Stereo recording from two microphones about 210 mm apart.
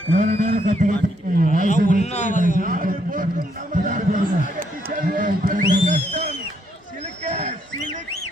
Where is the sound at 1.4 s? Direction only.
40° left (ahead or behind).